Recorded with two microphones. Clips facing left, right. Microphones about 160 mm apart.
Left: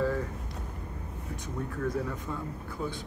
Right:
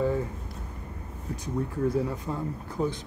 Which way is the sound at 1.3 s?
30° right (ahead or behind).